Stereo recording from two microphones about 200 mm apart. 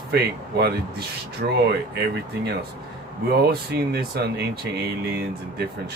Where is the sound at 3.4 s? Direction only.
55° right (ahead or behind).